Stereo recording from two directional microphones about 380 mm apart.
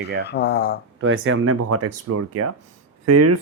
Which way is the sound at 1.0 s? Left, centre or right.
Right.